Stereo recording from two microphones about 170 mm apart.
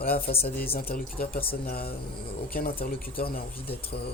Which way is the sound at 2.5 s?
60° left (ahead or behind).